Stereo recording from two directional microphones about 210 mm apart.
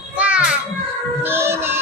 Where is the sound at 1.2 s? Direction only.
10° right (ahead or behind).